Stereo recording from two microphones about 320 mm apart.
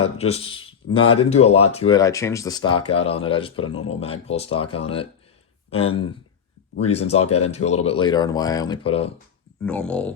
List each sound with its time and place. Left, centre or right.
0.0 s speech: centre
9.6 s speech: centre